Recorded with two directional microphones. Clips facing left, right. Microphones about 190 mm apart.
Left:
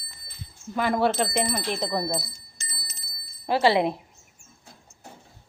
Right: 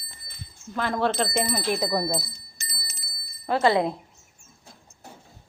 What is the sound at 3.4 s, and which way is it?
Speech, 25° left (ahead or behind).